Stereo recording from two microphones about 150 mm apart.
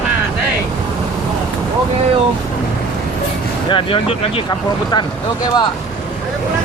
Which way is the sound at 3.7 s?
35° left (ahead or behind).